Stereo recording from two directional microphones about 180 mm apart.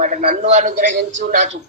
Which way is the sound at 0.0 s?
50° right (ahead or behind).